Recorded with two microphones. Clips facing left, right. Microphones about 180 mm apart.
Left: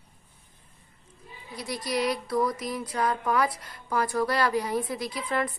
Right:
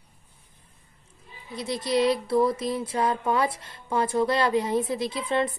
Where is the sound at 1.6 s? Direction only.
25° right (ahead or behind).